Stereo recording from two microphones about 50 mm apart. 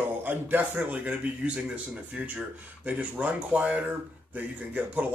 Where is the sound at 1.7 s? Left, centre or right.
Right.